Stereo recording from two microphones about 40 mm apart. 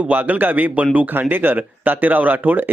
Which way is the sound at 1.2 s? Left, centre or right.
Right.